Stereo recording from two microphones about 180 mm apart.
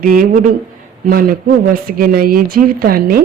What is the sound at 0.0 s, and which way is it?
Speech, 50° right (ahead or behind).